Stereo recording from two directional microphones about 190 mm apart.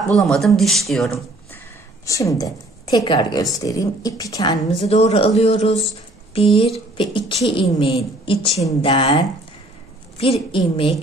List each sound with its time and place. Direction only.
0.1 s speech: centre (ahead or behind)
2.0 s a woman's voice: 15° left (ahead or behind)
4.8 s a woman's voice: 35° left (ahead or behind)